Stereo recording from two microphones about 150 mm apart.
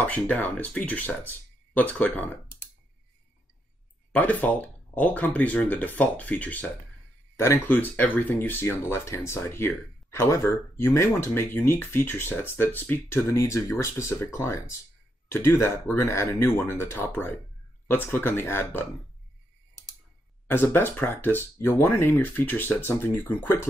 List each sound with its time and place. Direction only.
0.0 s speech: 10° left (ahead or behind)
4.1 s speech: 10° left (ahead or behind)
20.4 s speech: 15° left (ahead or behind)